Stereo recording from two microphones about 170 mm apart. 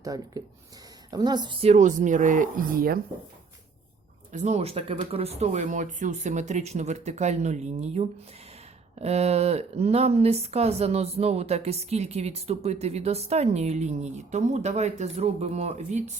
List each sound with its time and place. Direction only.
0.0 s speech: 20° right (ahead or behind); by 3.0 s 60° right (ahead or behind)
4.3 s speech: 45° right (ahead or behind)